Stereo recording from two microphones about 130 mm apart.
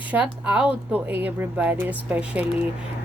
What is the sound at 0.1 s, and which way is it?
A woman's voice, 10° right (ahead or behind).